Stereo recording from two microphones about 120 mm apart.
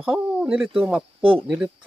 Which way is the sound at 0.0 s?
5° right (ahead or behind).